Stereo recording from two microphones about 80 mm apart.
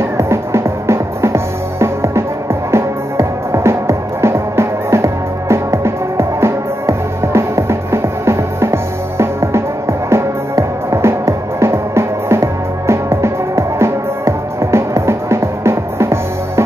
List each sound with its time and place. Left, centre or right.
0.2 s music: right